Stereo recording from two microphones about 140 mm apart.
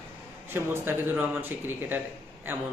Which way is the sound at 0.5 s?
15° right (ahead or behind).